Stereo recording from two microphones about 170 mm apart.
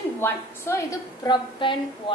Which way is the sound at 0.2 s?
15° left (ahead or behind).